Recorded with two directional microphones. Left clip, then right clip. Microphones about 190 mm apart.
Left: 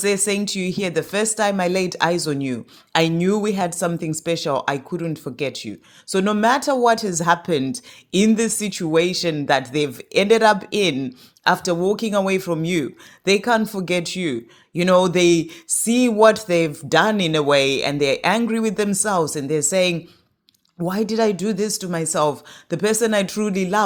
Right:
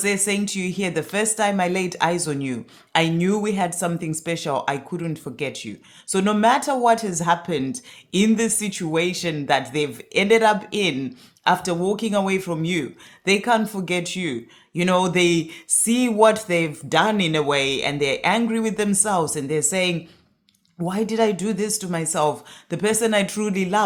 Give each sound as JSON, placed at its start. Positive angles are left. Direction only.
{"t": 0.0, "sound": "speech", "side_deg": 25}